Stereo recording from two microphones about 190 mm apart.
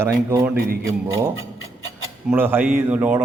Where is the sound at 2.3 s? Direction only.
10° right (ahead or behind).